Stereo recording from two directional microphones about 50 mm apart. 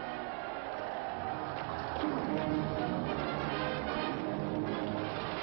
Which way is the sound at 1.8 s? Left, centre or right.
Left.